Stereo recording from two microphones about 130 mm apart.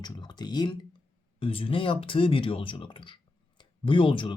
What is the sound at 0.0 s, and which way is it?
Speech, 35° left (ahead or behind).